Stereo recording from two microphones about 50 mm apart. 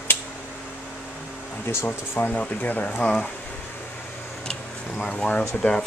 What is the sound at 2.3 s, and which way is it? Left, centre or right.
Speech, left.